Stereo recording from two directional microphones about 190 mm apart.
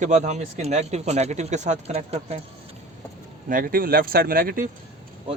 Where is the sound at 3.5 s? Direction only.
50° right (ahead or behind).